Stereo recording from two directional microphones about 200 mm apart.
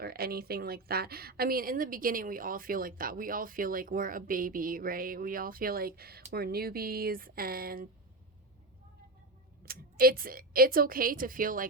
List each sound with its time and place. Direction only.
0.0 s a woman's voice: 50° right (ahead or behind)
9.6 s a woman's voice: 45° right (ahead or behind)